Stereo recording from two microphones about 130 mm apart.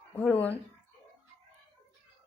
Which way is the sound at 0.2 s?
10° left (ahead or behind).